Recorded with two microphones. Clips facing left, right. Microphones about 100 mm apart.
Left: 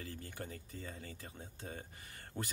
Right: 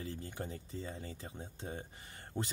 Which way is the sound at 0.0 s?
20° right (ahead or behind).